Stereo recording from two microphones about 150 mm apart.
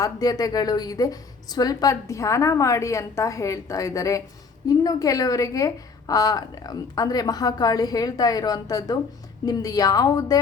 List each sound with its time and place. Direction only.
0.0 s a woman's voice: 25° left (ahead or behind)